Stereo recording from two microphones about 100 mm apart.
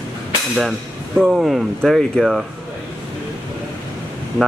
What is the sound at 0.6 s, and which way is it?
Speech, centre (ahead or behind).